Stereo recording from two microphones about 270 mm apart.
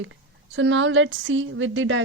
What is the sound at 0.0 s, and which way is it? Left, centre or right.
A woman's voice, right.